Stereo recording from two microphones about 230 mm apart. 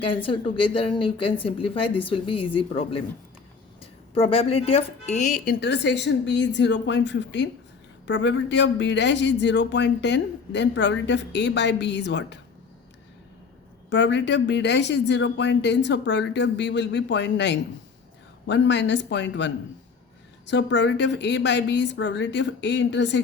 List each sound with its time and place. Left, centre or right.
0.0 s a woman's voice: left
4.1 s a man's voice: left
13.9 s a man's voice: left